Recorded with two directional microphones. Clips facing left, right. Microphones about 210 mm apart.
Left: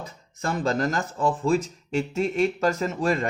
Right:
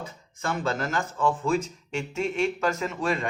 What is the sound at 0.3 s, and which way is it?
Speech, 35° left (ahead or behind).